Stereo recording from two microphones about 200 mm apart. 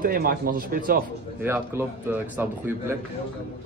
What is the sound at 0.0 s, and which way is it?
Speech, 45° right (ahead or behind).